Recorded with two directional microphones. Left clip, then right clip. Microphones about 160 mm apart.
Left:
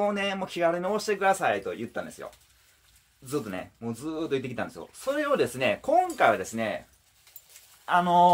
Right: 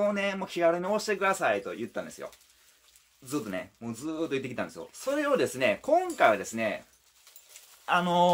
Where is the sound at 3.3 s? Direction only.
5° right (ahead or behind).